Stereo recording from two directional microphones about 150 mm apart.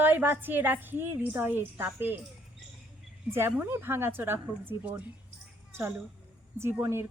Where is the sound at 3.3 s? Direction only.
15° right (ahead or behind).